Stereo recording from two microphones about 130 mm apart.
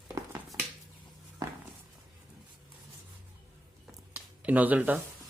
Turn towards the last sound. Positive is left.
turn(degrees=-10)  # may be behind; listen again after turning